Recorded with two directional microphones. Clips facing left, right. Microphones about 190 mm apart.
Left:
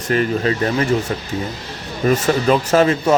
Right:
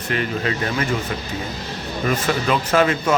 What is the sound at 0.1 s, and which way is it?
Speech, 35° left (ahead or behind).